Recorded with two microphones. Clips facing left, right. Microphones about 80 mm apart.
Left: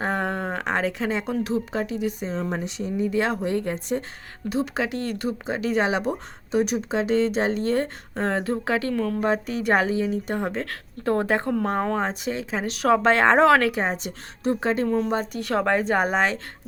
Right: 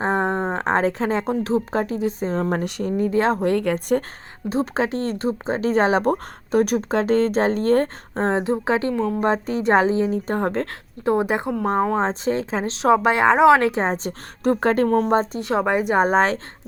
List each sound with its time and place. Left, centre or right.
0.0 s speech: right
2.3 s speech: right
3.1 s speech: right
3.4 s speech: right
4.4 s speech: right
9.2 s speech: right
10.7 s speech: centre
12.0 s speech: right
12.8 s speech: centre; by 14.1 s right
14.4 s speech: right; by 16.0 s centre
16.0 s speech: right